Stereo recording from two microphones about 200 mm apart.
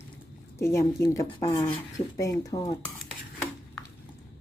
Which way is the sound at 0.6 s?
15° left (ahead or behind).